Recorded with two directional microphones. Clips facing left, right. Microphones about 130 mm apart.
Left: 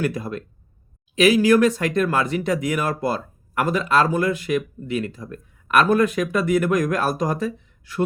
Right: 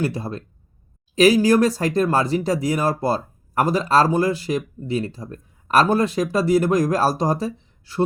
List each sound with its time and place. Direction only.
0.0 s speech: 30° right (ahead or behind)